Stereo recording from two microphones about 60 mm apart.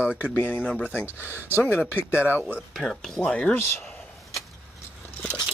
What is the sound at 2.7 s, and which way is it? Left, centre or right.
Speech, centre.